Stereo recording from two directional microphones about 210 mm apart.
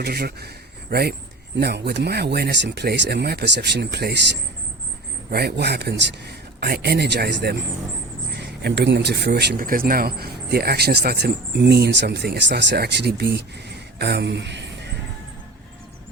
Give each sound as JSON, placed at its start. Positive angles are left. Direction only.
{"t": 0.0, "sound": "a man's voice", "side_deg": -50}
{"t": 5.3, "sound": "speech", "side_deg": -50}